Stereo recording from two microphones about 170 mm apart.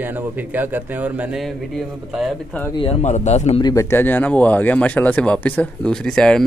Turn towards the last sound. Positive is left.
turn(degrees=5)  # may be behind; listen again after turning